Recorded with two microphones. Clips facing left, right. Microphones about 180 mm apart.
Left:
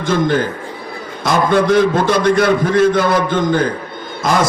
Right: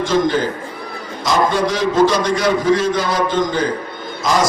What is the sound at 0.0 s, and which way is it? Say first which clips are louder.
A man's voice: left 1 dB; 55° left (ahead or behind).